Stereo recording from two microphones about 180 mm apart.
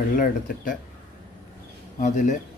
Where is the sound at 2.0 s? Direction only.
45° left (ahead or behind).